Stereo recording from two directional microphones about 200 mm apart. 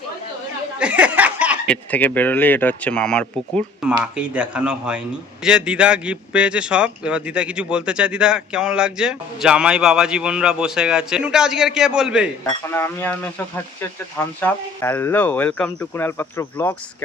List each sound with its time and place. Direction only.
0.8 s chuckle: 5° right (ahead or behind)
1.6 s a man's voice: 5° left (ahead or behind)
12.6 s speech: 10° left (ahead or behind)